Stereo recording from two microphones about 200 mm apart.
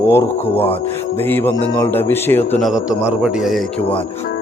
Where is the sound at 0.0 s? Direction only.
10° left (ahead or behind).